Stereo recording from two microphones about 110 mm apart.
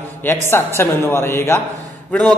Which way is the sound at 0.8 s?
25° left (ahead or behind).